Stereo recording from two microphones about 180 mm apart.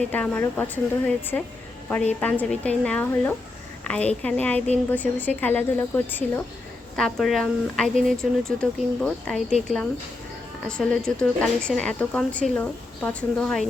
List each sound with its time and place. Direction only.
0.1 s speech: 10° left (ahead or behind)